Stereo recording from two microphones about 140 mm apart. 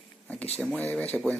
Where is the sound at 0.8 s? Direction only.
10° left (ahead or behind).